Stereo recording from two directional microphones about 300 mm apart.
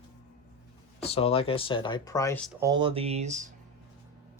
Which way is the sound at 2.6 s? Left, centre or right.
Centre.